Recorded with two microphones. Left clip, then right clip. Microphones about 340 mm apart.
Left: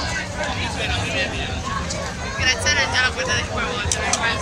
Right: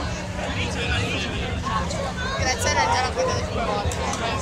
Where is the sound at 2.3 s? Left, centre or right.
Centre.